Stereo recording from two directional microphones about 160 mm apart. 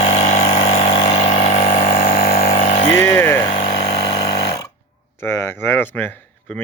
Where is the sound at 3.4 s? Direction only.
35° left (ahead or behind).